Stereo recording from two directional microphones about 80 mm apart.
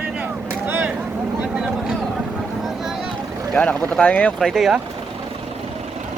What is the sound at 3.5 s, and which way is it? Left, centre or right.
Speech, centre.